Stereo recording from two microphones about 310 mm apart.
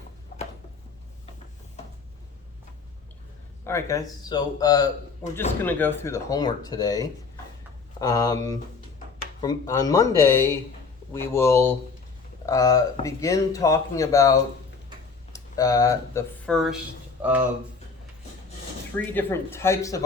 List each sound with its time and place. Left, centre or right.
0.3 s a sound: left
3.6 s speech: centre
9.4 s speech: centre
18.9 s speech: centre